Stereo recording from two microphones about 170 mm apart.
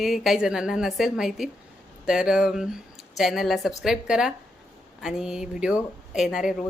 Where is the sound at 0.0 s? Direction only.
Centre (ahead or behind).